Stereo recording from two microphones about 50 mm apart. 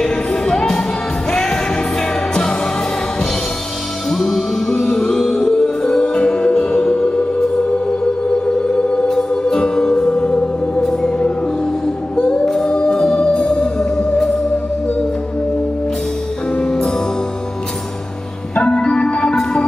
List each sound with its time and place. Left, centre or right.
0.0 s music: centre
4.1 s music: centre
8.6 s music: centre
12.2 s singing: left
12.5 s music: centre
16.5 s music: centre
18.5 s organ: centre